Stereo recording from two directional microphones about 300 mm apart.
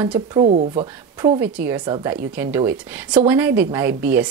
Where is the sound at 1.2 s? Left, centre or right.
Centre.